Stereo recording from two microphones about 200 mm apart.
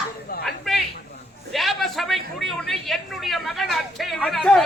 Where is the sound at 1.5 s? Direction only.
Centre (ahead or behind).